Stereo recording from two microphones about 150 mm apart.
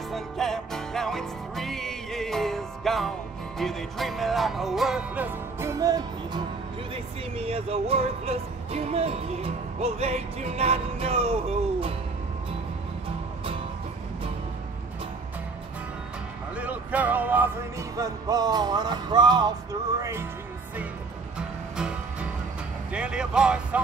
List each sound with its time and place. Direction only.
0.1 s music: centre (ahead or behind); by 6.4 s 25° right (ahead or behind)
7.3 s speech: 40° right (ahead or behind)
16.5 s music: 10° right (ahead or behind)
21.7 s music: 5° right (ahead or behind)
22.9 s speech: 5° right (ahead or behind)